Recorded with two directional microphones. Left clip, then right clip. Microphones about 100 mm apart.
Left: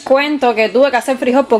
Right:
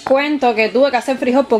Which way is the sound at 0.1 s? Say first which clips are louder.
Left 2 dB; 20° left (ahead or behind).